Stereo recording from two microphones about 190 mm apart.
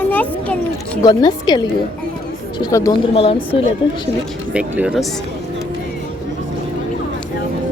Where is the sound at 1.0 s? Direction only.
20° left (ahead or behind).